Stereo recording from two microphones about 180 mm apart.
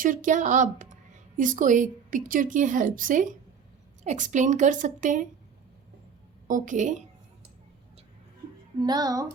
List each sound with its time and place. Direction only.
0.0 s speech: 45° right (ahead or behind)
6.5 s speech: 45° right (ahead or behind)
8.8 s speech: 20° right (ahead or behind)